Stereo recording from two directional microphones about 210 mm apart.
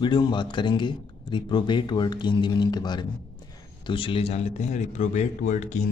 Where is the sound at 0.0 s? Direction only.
20° left (ahead or behind).